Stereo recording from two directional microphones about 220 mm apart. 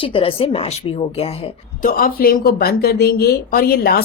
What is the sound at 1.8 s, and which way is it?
Speech, 40° left (ahead or behind).